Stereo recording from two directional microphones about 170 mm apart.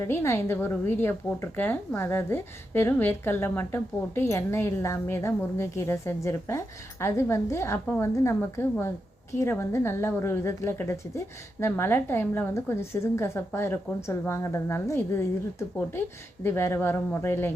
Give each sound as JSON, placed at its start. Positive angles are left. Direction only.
{"t": 0.1, "sound": "a woman's voice", "side_deg": 15}